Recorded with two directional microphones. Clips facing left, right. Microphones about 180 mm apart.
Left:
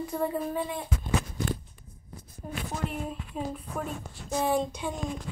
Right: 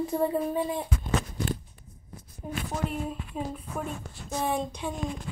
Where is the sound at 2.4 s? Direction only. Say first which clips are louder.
Right 3 dB; 15° right (ahead or behind).